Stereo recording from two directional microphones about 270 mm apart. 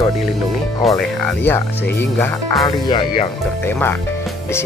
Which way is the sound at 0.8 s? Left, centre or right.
Centre.